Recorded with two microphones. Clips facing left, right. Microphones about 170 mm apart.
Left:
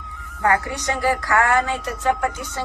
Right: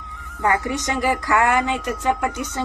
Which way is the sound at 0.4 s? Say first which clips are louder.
Even; 20° right (ahead or behind).